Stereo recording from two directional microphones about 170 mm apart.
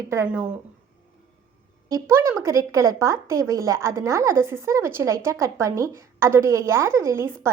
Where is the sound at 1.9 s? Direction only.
15° right (ahead or behind).